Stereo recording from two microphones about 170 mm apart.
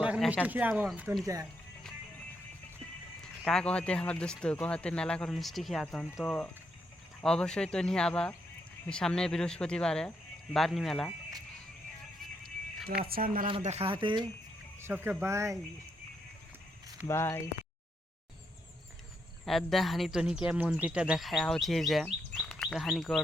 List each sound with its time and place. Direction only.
0.0 s a sound: 10° right (ahead or behind)
0.4 s speech: 10° right (ahead or behind)
3.4 s speech: 5° left (ahead or behind)
12.8 s speech: 5° right (ahead or behind)
13.1 s speech: 60° right (ahead or behind)
13.6 s speech: 40° right (ahead or behind)
14.8 s speech: 10° right (ahead or behind)
17.1 s speech: 15° left (ahead or behind)
19.5 s speech: centre (ahead or behind)